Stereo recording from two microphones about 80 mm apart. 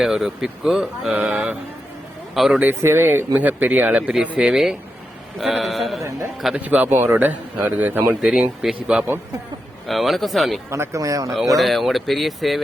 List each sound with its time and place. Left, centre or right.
0.0 s speech: centre
1.3 s speech: centre
2.3 s speech: centre
2.6 s speech: right; by 6.0 s centre
6.6 s speech: right
8.2 s speech: centre
10.7 s speech: right
11.5 s speech: centre